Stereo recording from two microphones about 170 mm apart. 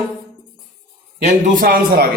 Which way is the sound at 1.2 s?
50° right (ahead or behind).